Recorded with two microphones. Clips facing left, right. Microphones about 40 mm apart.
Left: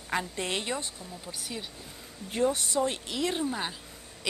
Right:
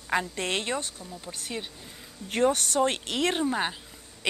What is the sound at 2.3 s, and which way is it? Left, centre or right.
A woman's voice, right.